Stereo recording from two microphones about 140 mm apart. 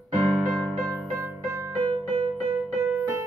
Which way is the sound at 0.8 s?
25° right (ahead or behind).